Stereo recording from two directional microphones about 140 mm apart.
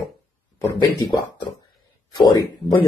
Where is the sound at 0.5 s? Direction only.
25° left (ahead or behind).